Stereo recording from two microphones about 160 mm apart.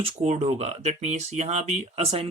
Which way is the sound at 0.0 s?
45° right (ahead or behind).